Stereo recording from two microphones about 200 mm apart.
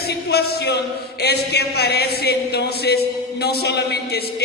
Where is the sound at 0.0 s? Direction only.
55° left (ahead or behind).